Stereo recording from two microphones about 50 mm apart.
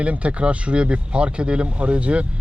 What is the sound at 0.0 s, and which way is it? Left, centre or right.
Speech, right.